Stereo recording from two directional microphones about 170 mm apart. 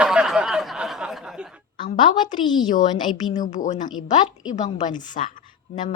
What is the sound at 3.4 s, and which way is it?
A woman's voice, 45° left (ahead or behind).